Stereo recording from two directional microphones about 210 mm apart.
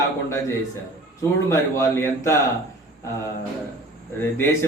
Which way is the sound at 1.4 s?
15° left (ahead or behind).